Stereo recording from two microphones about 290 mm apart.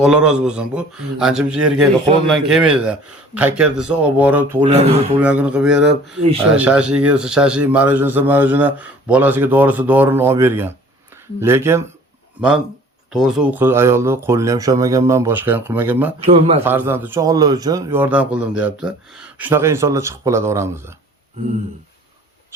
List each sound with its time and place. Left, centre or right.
0.0 s a man's voice: centre
4.7 s a man's voice: right
5.2 s a man's voice: centre
16.2 s a man's voice: centre
16.6 s a man's voice: centre